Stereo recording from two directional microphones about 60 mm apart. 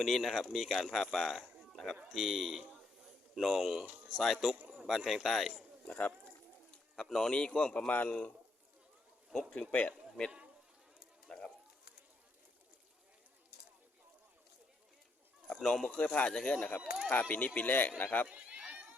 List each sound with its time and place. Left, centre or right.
0.0 s a man's voice: centre
4.5 s a sound: right
4.9 s a man's voice: centre
5.9 s speech: left
6.7 s speech: centre
7.9 s speech: left
9.5 s speech: centre
11.3 s bird: centre
15.6 s speech: centre
17.1 s speech: left
18.3 s run: centre